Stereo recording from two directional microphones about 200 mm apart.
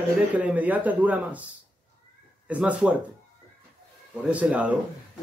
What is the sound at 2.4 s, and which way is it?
Speech, 5° right (ahead or behind).